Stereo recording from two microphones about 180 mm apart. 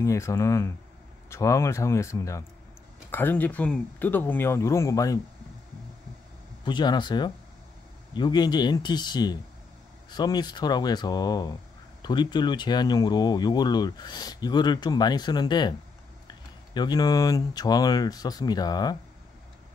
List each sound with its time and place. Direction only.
0.0 s speech: 15° left (ahead or behind)
6.6 s speech: 25° left (ahead or behind)